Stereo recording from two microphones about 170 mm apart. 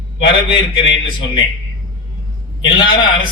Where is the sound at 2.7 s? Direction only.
30° left (ahead or behind).